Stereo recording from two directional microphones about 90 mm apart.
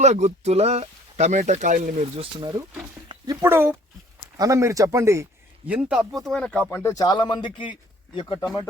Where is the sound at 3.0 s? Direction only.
50° right (ahead or behind).